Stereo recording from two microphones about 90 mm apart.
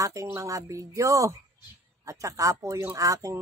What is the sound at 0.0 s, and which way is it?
Speech, 35° right (ahead or behind).